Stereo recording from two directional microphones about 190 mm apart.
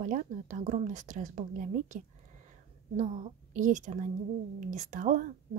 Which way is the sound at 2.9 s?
40° right (ahead or behind).